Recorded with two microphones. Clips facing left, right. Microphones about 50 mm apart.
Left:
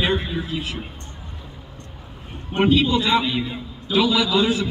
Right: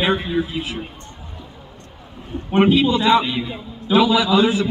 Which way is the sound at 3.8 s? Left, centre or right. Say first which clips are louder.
Right 4 dB; centre.